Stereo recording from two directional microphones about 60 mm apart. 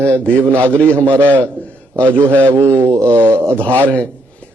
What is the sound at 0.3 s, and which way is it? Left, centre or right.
Speech, right.